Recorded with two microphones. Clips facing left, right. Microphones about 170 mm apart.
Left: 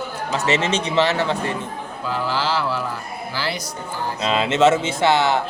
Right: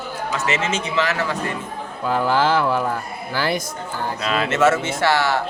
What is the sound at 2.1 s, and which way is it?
Speech, 50° right (ahead or behind).